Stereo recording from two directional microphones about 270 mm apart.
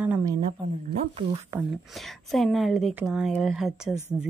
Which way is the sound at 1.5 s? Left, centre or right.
Centre.